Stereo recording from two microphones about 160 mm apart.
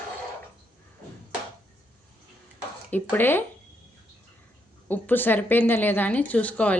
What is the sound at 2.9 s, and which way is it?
Speech, 10° left (ahead or behind).